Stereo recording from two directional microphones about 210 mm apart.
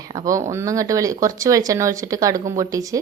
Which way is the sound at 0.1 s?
15° right (ahead or behind).